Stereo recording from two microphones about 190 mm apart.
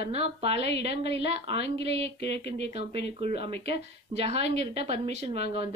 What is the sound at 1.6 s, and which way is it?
Speech, 65° left (ahead or behind).